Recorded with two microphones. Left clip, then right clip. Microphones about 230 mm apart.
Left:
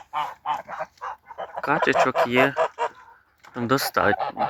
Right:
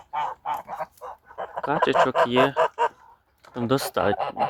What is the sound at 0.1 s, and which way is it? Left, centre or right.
Goose, left.